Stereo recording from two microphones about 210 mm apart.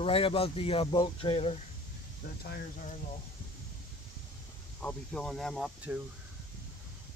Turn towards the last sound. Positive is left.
turn(degrees=-5)  # may be behind; listen again after turning